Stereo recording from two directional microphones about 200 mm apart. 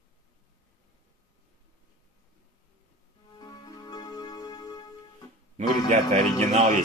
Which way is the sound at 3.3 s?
20° left (ahead or behind).